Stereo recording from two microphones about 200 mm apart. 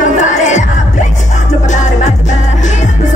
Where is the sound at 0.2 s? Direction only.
35° left (ahead or behind).